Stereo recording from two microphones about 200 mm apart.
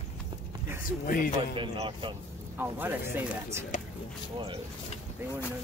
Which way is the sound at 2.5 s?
10° right (ahead or behind).